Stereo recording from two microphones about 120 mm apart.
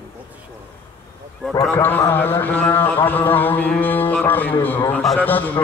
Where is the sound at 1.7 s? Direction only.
15° left (ahead or behind).